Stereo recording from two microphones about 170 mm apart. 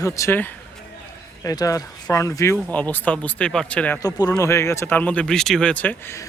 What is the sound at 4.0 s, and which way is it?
Speech, 20° left (ahead or behind).